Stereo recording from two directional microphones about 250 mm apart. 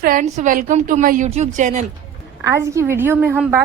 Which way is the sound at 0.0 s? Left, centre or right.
Right.